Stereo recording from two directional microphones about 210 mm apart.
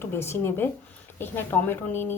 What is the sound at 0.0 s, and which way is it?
A woman's voice, 10° left (ahead or behind).